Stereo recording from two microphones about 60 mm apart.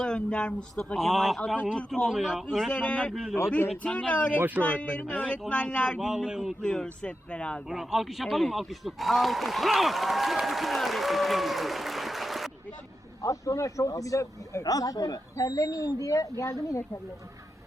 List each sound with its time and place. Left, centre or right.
0.0 s speech: centre
0.9 s a man's voice: centre
2.6 s speech: centre
3.1 s a man's voice: centre
3.8 s speech: centre
4.4 s speech: right
4.6 s speech: left
6.0 s a man's voice: centre
6.6 s speech: centre
7.7 s a man's voice: centre
13.2 s a man's voice: left
14.6 s speech: left